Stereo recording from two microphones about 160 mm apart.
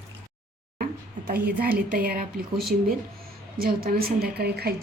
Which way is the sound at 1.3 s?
70° right (ahead or behind).